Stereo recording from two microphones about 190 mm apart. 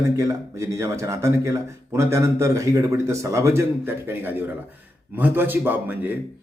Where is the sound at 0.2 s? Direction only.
15° right (ahead or behind).